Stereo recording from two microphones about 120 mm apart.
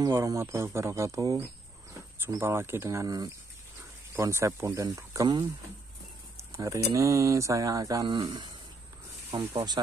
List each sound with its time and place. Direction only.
0.1 s speech: 25° right (ahead or behind)
9.4 s speech: 20° right (ahead or behind)